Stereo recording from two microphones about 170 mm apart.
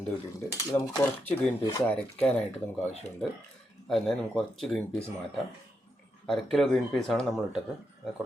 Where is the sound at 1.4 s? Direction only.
10° left (ahead or behind).